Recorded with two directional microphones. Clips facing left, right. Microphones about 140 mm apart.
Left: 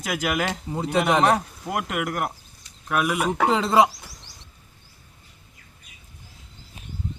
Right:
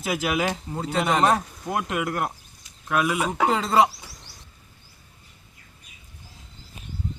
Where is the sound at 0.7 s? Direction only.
10° left (ahead or behind).